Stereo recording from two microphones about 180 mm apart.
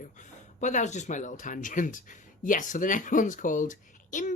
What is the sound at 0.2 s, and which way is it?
Speech, 40° left (ahead or behind).